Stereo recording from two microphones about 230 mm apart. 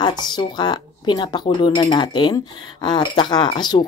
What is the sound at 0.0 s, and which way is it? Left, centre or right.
Speech, centre.